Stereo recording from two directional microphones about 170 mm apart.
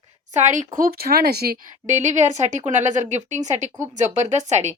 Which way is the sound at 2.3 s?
45° right (ahead or behind).